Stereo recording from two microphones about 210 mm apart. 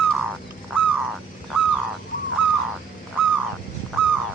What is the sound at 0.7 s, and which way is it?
Crow, centre (ahead or behind).